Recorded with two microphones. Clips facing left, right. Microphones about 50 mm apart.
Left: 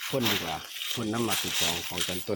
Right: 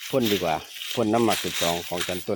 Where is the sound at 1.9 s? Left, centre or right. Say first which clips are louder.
Right 5 dB; right.